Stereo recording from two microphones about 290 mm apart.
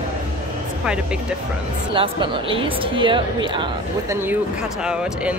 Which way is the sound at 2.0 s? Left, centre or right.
Centre.